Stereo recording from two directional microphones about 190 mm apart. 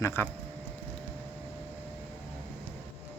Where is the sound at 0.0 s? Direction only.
15° left (ahead or behind).